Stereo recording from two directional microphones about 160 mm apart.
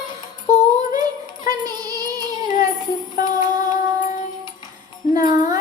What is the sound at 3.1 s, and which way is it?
Music, 20° right (ahead or behind).